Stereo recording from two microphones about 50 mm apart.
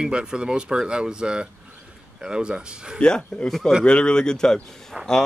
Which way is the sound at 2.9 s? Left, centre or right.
Centre.